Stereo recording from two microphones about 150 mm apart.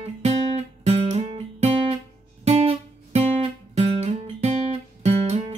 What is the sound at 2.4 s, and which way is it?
Music, 40° right (ahead or behind).